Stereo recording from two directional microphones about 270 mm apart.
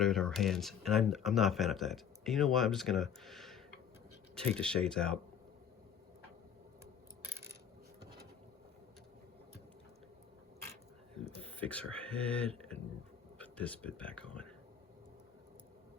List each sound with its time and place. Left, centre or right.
0.0 s speech: centre
11.3 s a sound: centre
12.2 s speech: centre